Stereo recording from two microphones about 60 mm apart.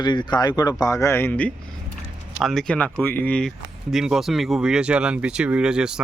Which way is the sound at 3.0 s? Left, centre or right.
Left.